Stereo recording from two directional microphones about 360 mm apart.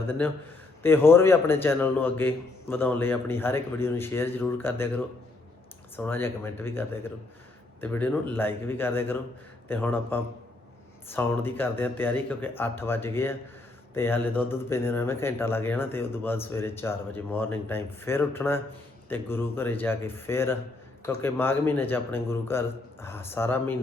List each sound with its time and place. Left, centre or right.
0.8 s a man's voice: centre